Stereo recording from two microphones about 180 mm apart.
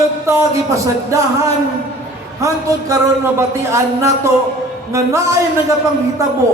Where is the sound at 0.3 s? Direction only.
15° right (ahead or behind).